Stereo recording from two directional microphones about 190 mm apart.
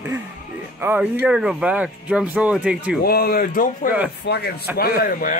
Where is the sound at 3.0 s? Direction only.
55° left (ahead or behind).